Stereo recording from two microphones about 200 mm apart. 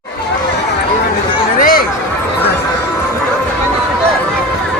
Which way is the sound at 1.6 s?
45° left (ahead or behind).